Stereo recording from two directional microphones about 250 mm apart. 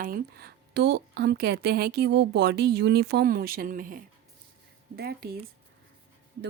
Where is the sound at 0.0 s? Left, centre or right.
Right.